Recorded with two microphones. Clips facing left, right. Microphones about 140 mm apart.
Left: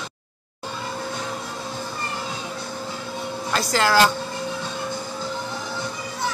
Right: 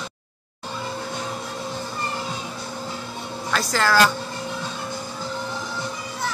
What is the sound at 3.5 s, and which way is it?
Speech, 20° left (ahead or behind).